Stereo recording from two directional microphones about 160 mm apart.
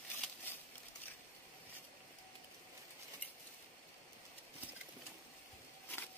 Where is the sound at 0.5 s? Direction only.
15° left (ahead or behind).